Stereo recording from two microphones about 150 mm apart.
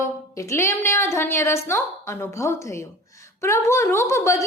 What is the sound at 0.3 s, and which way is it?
A woman's voice, 20° left (ahead or behind).